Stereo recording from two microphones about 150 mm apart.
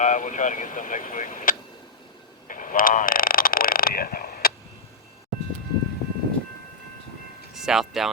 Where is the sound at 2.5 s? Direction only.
65° left (ahead or behind); by 4.5 s 80° left.